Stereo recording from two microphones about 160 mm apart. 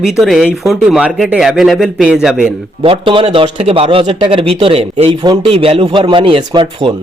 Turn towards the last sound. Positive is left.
turn(degrees=-30)  # may be behind; listen again after turning